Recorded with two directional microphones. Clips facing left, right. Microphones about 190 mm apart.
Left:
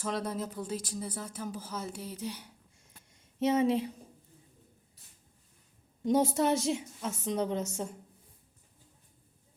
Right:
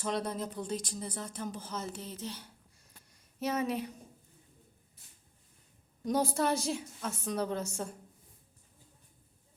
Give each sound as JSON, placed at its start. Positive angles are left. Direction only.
{"t": 0.0, "sound": "speech", "side_deg": 5}
{"t": 3.1, "sound": "a sound", "side_deg": 25}
{"t": 6.0, "sound": "a woman's voice", "side_deg": 25}